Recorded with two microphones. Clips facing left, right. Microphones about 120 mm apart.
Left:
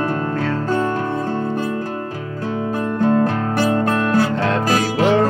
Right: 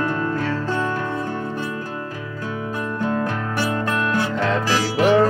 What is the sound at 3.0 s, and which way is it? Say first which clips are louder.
Music: left 7 dB; 35° left (ahead or behind).